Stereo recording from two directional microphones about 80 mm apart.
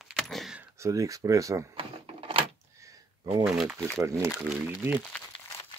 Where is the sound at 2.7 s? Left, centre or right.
Right.